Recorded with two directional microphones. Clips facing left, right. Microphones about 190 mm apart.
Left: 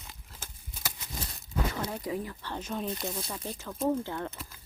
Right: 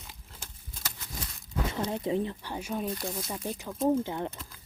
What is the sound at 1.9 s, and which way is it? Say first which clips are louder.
Speech: right 5 dB; 25° right (ahead or behind).